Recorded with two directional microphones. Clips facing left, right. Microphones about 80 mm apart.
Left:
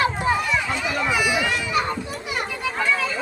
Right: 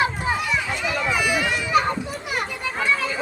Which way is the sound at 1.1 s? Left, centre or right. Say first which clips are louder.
Left 1 dB; centre.